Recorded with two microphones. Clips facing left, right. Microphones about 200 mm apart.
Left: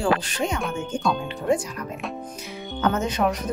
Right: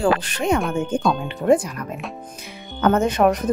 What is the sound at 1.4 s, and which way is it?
Speech, 60° right (ahead or behind).